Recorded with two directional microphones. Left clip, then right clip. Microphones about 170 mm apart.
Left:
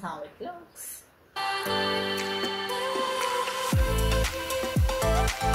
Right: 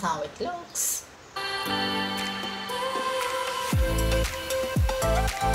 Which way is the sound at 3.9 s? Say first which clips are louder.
Right 1 dB; centre (ahead or behind).